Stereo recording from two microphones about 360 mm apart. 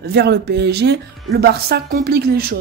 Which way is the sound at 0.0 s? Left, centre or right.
Right.